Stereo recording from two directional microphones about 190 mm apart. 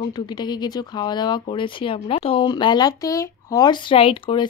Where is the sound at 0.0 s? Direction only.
20° left (ahead or behind).